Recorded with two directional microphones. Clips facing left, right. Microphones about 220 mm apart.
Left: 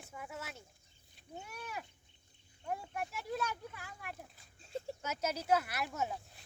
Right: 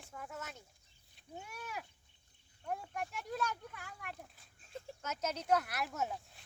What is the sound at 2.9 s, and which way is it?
Speech, 5° left (ahead or behind).